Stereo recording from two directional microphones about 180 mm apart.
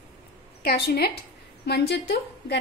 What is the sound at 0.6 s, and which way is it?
A woman's voice, 60° left (ahead or behind).